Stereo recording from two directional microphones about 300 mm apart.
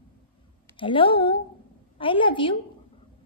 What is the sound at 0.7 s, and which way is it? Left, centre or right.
Speech, centre.